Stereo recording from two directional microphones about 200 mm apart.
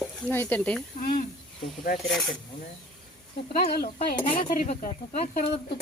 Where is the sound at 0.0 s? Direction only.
5° left (ahead or behind).